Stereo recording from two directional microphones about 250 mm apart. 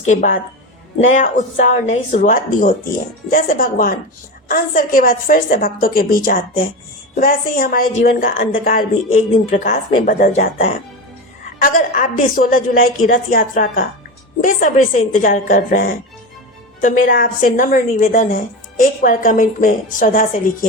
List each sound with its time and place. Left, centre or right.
0.0 s speech: left